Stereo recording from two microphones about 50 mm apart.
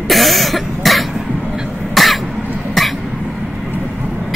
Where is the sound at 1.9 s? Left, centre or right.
Centre.